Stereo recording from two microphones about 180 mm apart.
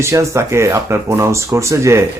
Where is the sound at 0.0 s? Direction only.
15° right (ahead or behind).